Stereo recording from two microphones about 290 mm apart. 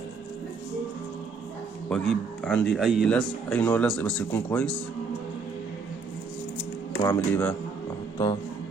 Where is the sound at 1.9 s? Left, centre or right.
Centre.